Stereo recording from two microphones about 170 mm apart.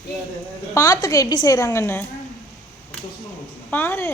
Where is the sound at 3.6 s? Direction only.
10° left (ahead or behind).